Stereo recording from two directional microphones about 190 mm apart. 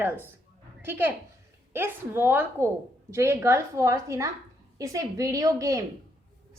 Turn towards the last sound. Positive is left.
turn(degrees=-15)  # may be behind; listen again after turning